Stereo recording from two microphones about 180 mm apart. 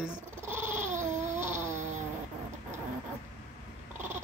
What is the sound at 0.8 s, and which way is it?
Dog, 40° right (ahead or behind).